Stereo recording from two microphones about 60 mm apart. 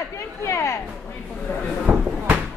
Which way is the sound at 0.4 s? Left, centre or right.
Left.